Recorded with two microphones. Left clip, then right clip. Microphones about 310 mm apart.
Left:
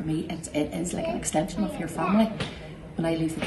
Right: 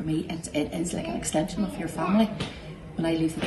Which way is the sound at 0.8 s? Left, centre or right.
Centre.